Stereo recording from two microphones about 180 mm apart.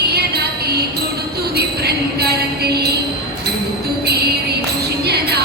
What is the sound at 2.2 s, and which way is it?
Music, 65° right (ahead or behind).